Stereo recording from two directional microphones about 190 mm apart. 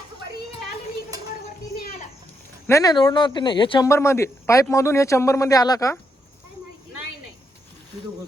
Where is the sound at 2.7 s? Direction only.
20° left (ahead or behind).